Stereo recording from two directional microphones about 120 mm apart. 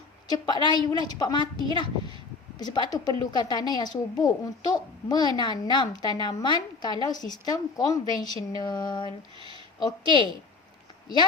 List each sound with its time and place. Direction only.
0.3 s a woman's voice: 40° left (ahead or behind)
2.6 s a woman's voice: 35° left (ahead or behind)